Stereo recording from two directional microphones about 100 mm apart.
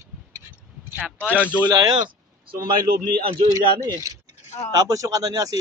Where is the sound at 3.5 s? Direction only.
40° right (ahead or behind).